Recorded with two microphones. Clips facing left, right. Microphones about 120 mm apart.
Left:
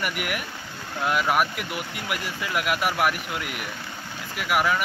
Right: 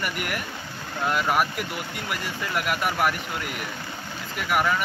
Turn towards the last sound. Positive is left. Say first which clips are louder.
# even
turn(degrees=5)  # may be behind; listen again after turning